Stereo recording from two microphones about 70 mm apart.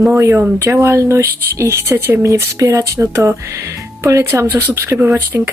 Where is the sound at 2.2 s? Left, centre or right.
Right.